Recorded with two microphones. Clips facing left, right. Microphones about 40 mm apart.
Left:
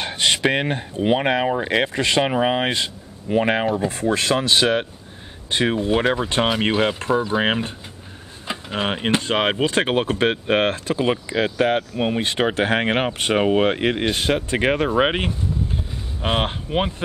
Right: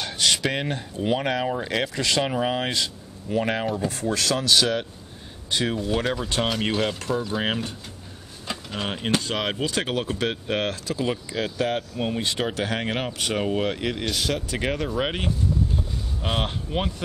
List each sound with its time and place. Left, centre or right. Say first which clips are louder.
0.0 s speech: left 4 dB; left